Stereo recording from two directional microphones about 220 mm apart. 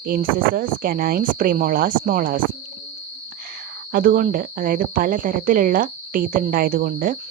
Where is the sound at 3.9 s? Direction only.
40° right (ahead or behind).